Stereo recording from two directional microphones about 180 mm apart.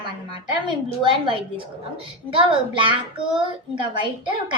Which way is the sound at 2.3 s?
30° right (ahead or behind).